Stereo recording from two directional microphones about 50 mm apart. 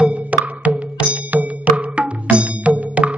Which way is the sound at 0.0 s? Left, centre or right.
Right.